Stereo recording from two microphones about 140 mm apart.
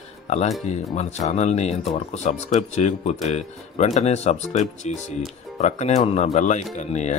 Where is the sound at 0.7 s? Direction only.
55° left (ahead or behind).